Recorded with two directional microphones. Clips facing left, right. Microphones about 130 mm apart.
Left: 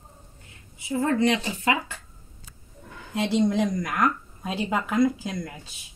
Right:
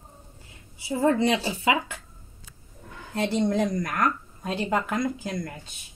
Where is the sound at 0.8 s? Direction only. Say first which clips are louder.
Right 1 dB; 30° right (ahead or behind).